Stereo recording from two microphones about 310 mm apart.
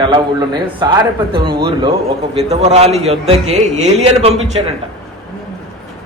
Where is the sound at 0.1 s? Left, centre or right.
Centre.